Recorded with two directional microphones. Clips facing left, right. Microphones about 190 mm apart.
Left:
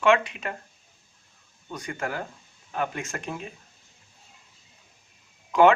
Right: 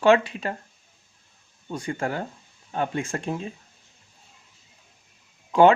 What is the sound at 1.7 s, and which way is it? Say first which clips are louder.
Speech: right 4 dB; 30° right (ahead or behind).